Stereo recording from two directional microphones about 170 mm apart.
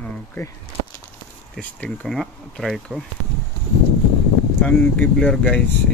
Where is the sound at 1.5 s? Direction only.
5° left (ahead or behind).